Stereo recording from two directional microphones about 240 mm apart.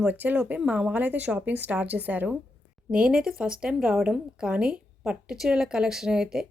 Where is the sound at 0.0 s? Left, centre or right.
Centre.